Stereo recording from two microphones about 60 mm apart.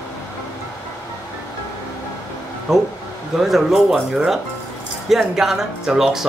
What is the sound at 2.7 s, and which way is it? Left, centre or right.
Speech, centre.